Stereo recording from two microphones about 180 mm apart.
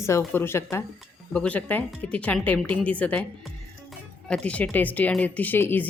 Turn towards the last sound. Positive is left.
turn(degrees=10)  # may be behind; listen again after turning